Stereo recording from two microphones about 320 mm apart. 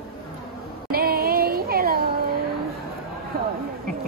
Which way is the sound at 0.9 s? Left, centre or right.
Right.